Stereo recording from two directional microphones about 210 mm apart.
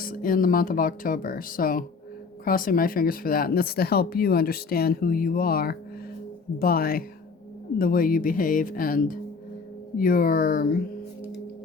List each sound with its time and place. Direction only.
0.0 s speech: 40° left (ahead or behind)